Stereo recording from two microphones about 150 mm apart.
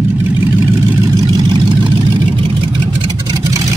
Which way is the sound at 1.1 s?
30° right (ahead or behind).